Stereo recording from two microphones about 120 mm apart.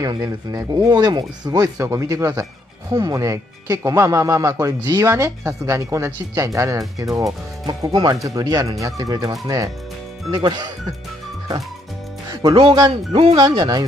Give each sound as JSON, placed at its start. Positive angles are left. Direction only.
{"t": 0.0, "sound": "speech", "side_deg": -30}
{"t": 12.3, "sound": "speech", "side_deg": -35}
{"t": 12.9, "sound": "speech", "side_deg": -55}
{"t": 13.4, "sound": "speech", "side_deg": -35}